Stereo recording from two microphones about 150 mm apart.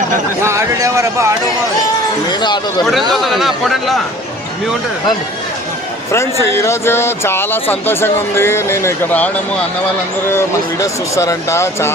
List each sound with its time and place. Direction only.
0.4 s a sound: 20° right (ahead or behind)
2.3 s speech: 30° left (ahead or behind)
2.8 s speech: centre (ahead or behind)
6.4 s speech: 20° left (ahead or behind)